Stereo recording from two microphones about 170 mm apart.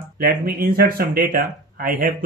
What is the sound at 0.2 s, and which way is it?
Speech, 60° right (ahead or behind).